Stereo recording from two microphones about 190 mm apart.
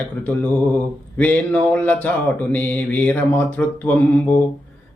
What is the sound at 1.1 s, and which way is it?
Mantra, 10° left (ahead or behind).